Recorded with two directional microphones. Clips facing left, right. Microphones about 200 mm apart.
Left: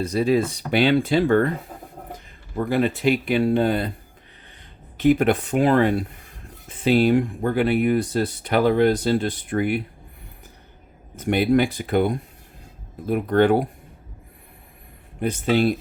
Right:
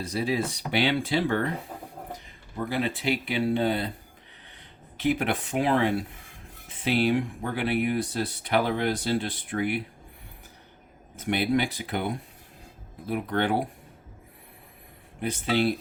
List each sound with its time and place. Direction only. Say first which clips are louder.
0.1 s speech: left 6 dB; 55° left (ahead or behind)
2.6 s speech: left 7 dB; 50° left (ahead or behind)
5.0 s speech: left 8 dB; 45° left (ahead or behind)
6.9 s speech: left 6 dB; 50° left (ahead or behind)
11.3 s speech: left 6 dB; 50° left (ahead or behind)
15.2 s speech: left 5 dB; 50° left (ahead or behind)